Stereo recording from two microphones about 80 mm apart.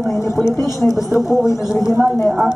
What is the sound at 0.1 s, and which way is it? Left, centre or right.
Speech, left.